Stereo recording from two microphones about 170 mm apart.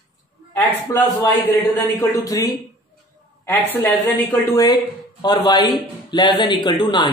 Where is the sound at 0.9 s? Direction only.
20° left (ahead or behind).